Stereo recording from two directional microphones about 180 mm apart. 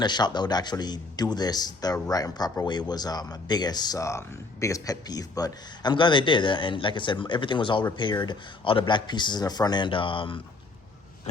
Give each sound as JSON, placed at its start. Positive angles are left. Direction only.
{"t": 0.0, "sound": "speech", "side_deg": 25}